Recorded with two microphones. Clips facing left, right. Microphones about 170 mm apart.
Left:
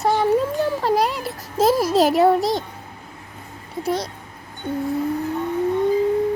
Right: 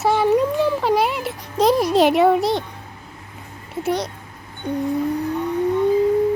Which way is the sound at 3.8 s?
Centre (ahead or behind).